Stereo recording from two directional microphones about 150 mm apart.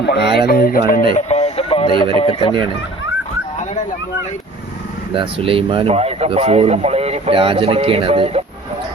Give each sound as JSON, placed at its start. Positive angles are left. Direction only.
{"t": 0.3, "sound": "music", "side_deg": 85}
{"t": 1.1, "sound": "radio", "side_deg": 45}
{"t": 2.1, "sound": "speech", "side_deg": 40}
{"t": 5.1, "sound": "speech", "side_deg": -35}